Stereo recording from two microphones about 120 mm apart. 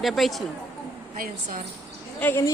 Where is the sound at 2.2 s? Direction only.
20° left (ahead or behind).